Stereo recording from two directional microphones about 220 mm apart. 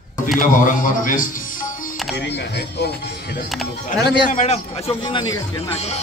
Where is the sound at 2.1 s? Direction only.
50° left (ahead or behind).